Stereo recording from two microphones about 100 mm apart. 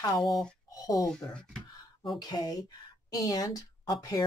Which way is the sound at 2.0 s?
45° left (ahead or behind).